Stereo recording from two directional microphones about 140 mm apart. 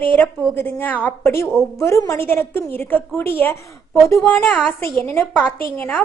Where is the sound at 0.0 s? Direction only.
10° left (ahead or behind).